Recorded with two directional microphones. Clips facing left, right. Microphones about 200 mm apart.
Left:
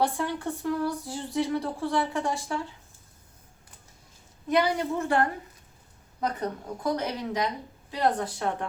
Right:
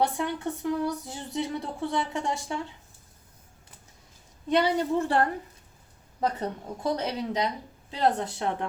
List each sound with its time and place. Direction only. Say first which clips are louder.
0.0 s speech: even; 20° right (ahead or behind)
4.4 s speech: right 1 dB; 30° right (ahead or behind)